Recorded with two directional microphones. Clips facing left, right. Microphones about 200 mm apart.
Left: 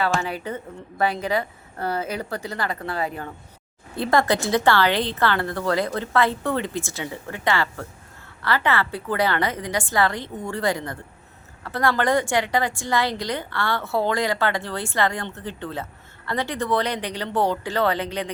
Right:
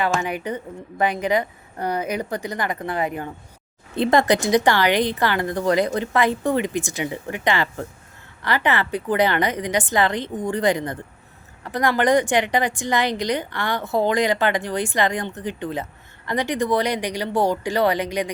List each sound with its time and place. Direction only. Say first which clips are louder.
0.0 s a woman's voice: right 1 dB; 15° right (ahead or behind)